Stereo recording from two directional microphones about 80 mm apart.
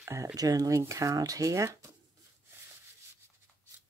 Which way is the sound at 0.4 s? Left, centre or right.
Right.